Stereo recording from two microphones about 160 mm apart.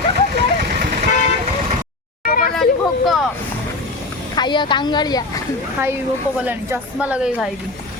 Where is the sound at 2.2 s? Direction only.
65° left (ahead or behind).